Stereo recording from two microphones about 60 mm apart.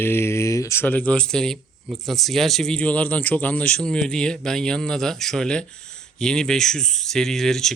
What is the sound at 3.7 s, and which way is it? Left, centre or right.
Speech, centre.